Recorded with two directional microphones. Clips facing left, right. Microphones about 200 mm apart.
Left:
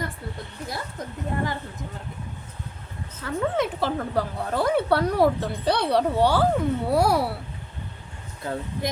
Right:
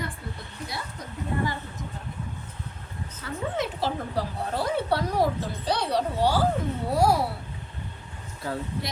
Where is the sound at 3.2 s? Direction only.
50° left (ahead or behind); by 7.2 s 65° left (ahead or behind).